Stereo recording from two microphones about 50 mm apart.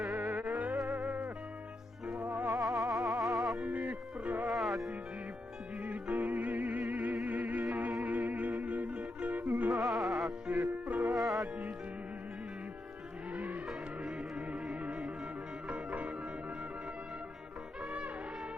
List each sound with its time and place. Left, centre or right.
0.1 s music: right
2.3 s music: right
2.6 s music: centre
3.7 s music: right
4.5 s music: centre
5.8 s music: right
9.8 s music: centre
10.5 s music: right
11.1 s music: centre
13.3 s music: right
15.9 s music: right